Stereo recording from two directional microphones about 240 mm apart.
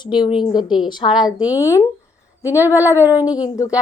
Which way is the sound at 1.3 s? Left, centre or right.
Centre.